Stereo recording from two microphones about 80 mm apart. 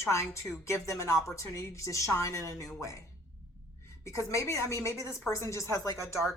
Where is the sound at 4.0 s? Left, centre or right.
Left.